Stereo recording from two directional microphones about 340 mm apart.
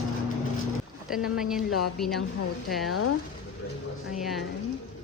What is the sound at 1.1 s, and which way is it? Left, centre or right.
Speech, centre.